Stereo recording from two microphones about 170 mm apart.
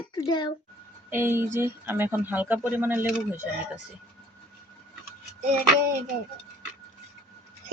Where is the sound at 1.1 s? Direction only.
15° right (ahead or behind).